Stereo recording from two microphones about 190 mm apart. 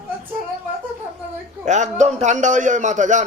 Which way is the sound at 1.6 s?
40° right (ahead or behind).